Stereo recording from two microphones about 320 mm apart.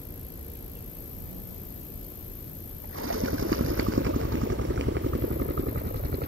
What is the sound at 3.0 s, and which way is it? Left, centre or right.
Vehicle, right.